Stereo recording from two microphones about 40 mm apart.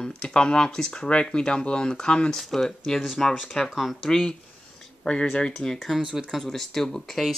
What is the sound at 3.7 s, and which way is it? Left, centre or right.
Speech, centre.